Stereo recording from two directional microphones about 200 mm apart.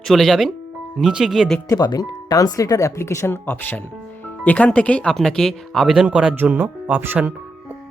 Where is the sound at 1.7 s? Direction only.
20° left (ahead or behind); by 7.7 s 10° right (ahead or behind).